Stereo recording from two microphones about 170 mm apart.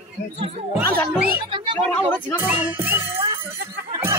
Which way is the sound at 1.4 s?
25° right (ahead or behind).